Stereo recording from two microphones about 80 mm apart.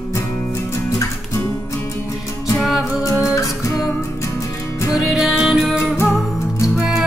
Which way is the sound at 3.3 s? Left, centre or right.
Left.